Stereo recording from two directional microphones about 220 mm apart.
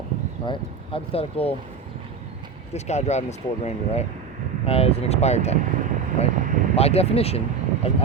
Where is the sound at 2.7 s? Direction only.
30° left (ahead or behind).